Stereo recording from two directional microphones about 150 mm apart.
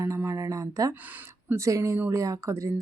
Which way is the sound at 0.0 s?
20° right (ahead or behind).